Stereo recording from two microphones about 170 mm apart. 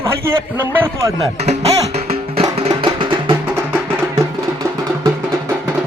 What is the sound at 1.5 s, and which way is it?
Speech, 40° right (ahead or behind).